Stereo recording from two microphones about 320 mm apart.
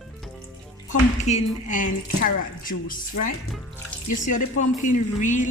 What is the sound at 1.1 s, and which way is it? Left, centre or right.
A woman's voice, left.